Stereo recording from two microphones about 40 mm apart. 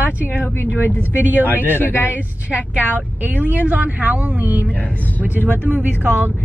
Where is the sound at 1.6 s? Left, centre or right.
Left.